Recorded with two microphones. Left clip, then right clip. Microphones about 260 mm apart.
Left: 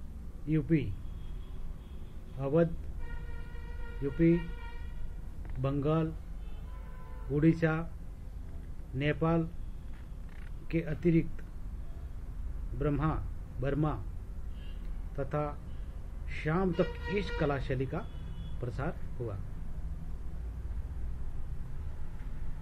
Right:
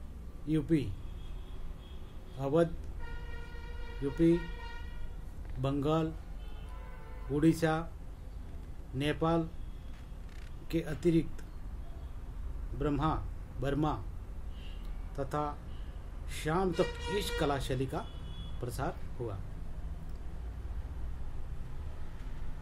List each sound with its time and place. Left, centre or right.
0.5 s speech: right
2.3 s speech: right
4.0 s speech: right
5.6 s speech: right
7.2 s speech: right
8.9 s speech: right
10.7 s speech: right
12.7 s a man's voice: right
15.1 s speech: right